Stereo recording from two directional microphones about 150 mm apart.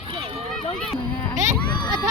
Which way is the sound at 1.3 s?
55° right (ahead or behind).